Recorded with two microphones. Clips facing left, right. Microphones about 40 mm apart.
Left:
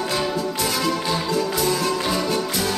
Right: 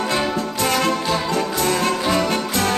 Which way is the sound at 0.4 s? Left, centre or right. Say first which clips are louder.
Right 3 dB; right.